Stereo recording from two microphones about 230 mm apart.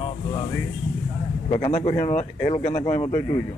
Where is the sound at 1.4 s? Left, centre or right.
Left.